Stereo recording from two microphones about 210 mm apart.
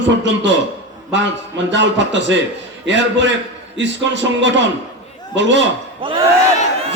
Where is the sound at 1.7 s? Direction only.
60° right (ahead or behind).